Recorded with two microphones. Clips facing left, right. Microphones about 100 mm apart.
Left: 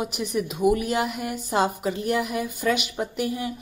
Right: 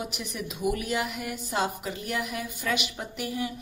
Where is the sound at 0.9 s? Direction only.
35° left (ahead or behind).